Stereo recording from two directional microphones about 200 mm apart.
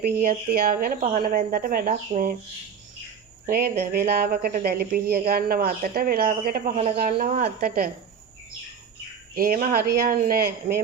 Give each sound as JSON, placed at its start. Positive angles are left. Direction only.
{"t": 0.0, "sound": "speech", "side_deg": -45}
{"t": 3.4, "sound": "speech", "side_deg": -45}
{"t": 9.3, "sound": "speech", "side_deg": -45}